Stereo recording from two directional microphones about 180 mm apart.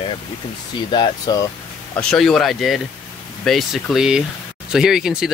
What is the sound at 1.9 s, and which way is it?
Speech, 5° left (ahead or behind).